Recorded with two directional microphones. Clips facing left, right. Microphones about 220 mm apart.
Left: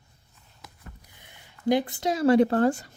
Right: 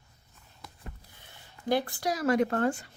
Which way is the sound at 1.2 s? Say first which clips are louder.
Left 10 dB; 15° left (ahead or behind).